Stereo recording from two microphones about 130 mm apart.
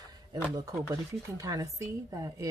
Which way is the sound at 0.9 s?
25° right (ahead or behind).